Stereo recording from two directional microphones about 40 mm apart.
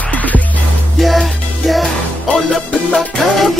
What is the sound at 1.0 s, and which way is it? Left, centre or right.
Music, centre.